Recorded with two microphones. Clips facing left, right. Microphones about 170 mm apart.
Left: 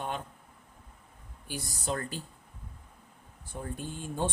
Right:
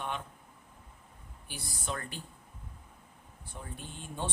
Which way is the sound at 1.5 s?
40° left (ahead or behind).